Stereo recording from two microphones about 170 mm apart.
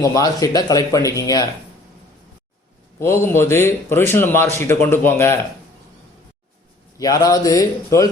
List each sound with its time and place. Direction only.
0.0 s speech: 20° left (ahead or behind)
3.0 s speech: 15° left (ahead or behind)
7.0 s speech: 20° left (ahead or behind)